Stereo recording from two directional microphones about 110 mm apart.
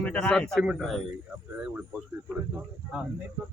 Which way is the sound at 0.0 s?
10° left (ahead or behind).